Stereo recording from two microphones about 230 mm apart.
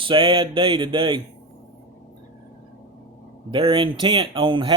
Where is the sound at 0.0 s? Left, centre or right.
Right.